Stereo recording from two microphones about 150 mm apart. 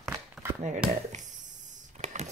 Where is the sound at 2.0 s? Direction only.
50° right (ahead or behind).